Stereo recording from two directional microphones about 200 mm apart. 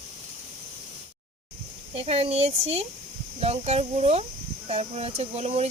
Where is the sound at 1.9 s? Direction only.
30° right (ahead or behind).